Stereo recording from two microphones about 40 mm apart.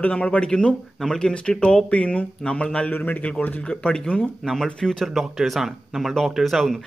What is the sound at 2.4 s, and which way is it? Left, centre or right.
Speech, left.